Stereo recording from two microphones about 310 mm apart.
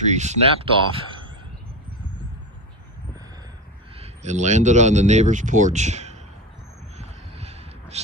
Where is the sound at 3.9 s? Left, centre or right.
Right.